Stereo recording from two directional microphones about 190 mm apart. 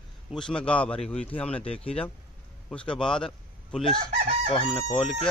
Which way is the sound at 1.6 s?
30° left (ahead or behind).